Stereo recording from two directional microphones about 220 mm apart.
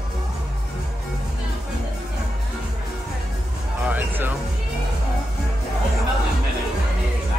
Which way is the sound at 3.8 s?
5° right (ahead or behind).